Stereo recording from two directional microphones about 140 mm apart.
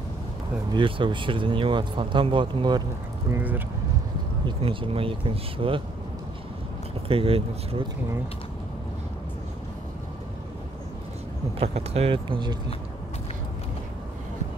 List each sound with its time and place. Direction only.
0.7 s speech: 35° right (ahead or behind)
3.3 s speech: 15° right (ahead or behind)
4.5 s speech: 40° right (ahead or behind)
7.1 s speech: 40° right (ahead or behind)
11.6 s speech: 45° right (ahead or behind)